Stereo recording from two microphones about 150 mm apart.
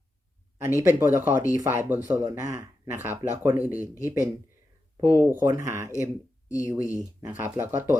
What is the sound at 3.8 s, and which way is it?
Speech, 20° left (ahead or behind).